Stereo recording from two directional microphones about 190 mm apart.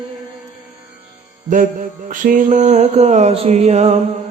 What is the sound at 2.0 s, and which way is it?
Mantra, 45° right (ahead or behind).